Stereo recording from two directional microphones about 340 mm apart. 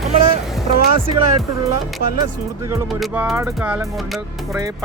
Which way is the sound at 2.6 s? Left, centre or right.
Centre.